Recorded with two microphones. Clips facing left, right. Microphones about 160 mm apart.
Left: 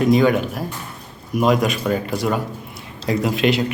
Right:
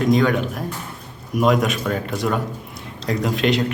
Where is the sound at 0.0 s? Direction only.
5° left (ahead or behind).